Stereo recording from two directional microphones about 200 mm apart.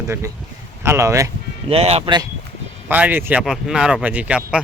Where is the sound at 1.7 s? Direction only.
30° right (ahead or behind).